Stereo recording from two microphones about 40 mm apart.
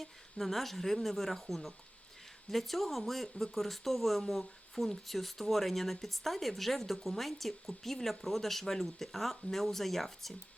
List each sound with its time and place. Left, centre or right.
0.0 s speech: centre